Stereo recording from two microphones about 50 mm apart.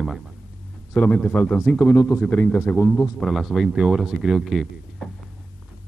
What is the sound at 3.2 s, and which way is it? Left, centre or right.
Speech, centre.